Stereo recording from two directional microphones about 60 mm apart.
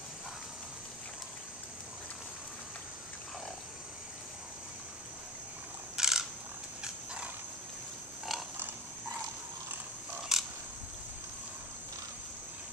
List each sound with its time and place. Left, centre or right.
5.9 s a sound: centre
8.3 s pig: centre
10.3 s camera: centre